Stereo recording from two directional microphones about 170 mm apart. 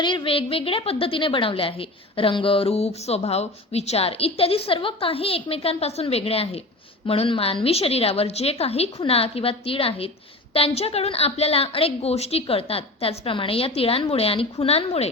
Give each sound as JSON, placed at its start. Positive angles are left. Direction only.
{"t": 0.0, "sound": "a woman's voice", "side_deg": 30}